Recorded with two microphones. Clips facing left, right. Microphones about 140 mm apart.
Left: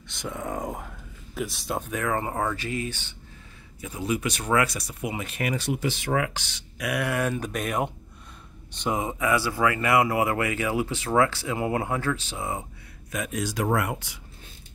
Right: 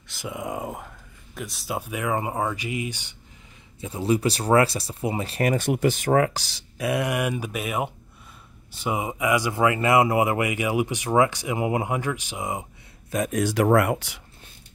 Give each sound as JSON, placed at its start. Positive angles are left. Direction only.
{"t": 0.1, "sound": "speech", "side_deg": -10}
{"t": 3.8, "sound": "speech", "side_deg": -30}
{"t": 13.1, "sound": "speech", "side_deg": -40}
{"t": 13.4, "sound": "speech", "side_deg": -65}